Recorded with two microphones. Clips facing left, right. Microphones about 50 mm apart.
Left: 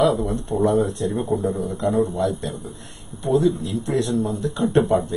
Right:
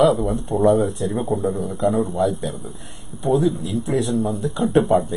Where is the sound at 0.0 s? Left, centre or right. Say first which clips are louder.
Right 2 dB; centre.